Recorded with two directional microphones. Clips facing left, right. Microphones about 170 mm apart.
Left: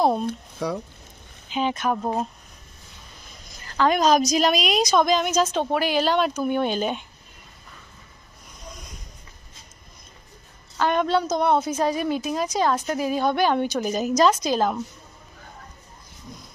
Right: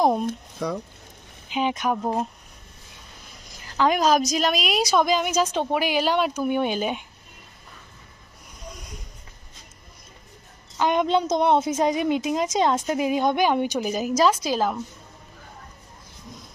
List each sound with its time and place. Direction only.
0.0 s speech: 15° right (ahead or behind)
1.5 s a woman's voice: 15° right (ahead or behind)
3.8 s a woman's voice: 10° right (ahead or behind)
10.8 s a woman's voice: 15° right (ahead or behind)